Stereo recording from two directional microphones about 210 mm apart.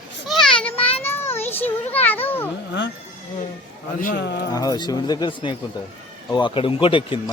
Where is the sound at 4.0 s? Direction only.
45° left (ahead or behind).